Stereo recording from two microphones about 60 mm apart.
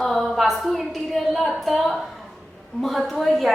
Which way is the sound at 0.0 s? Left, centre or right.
Centre.